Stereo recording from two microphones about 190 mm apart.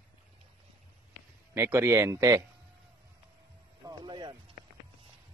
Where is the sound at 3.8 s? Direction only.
20° right (ahead or behind).